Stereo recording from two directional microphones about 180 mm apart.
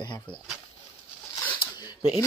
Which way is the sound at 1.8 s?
25° left (ahead or behind).